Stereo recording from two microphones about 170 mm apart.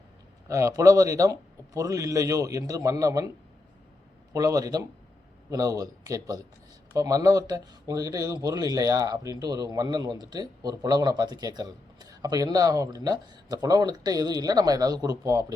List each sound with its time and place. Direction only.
0.4 s speech: 20° right (ahead or behind)
4.3 s speech: 20° right (ahead or behind)